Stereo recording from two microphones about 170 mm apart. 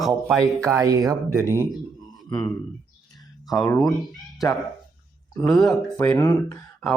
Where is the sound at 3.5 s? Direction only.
25° left (ahead or behind).